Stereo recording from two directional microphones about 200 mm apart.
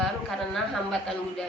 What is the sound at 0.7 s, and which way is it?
Speech, centre (ahead or behind).